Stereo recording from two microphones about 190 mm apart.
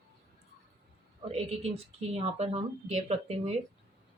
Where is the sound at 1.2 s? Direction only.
35° right (ahead or behind).